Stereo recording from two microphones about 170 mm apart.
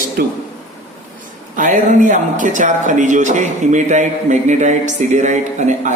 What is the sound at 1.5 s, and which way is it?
Speech, 50° right (ahead or behind).